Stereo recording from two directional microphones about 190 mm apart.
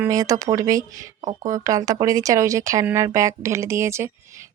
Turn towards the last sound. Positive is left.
turn(degrees=-15)  # may be behind; listen again after turning